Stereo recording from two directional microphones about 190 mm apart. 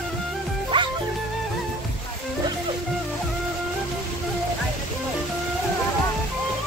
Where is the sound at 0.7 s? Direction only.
25° right (ahead or behind).